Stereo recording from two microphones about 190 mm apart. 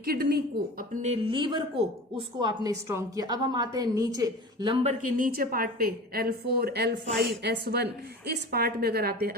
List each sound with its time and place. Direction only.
0.0 s a woman's voice: 55° right (ahead or behind)
1.0 s music: 30° right (ahead or behind)
2.1 s a woman's voice: 20° right (ahead or behind); by 9.1 s 55° right (ahead or behind)